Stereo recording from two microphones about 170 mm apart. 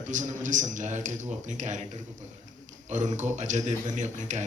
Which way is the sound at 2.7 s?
45° right (ahead or behind).